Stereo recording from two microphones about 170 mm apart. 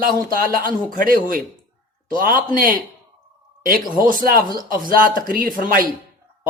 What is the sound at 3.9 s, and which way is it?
Speech, 55° right (ahead or behind).